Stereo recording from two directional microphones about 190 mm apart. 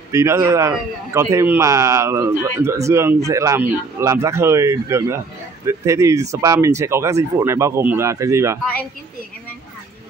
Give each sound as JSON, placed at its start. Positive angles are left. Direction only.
{"t": 0.1, "sound": "a man's voice", "side_deg": -15}